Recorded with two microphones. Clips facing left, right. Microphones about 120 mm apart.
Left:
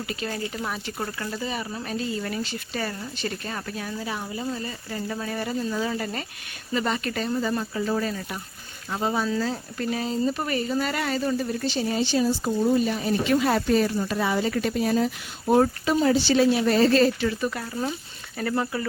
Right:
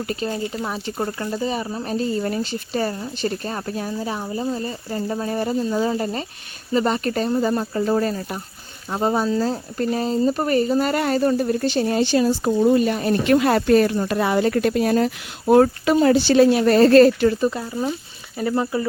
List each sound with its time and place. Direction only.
0.3 s speech: 25° right (ahead or behind); by 17.2 s 55° right (ahead or behind)
18.3 s speech: 15° right (ahead or behind)